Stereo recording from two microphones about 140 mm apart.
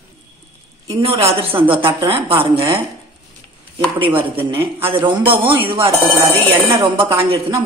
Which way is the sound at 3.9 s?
40° right (ahead or behind).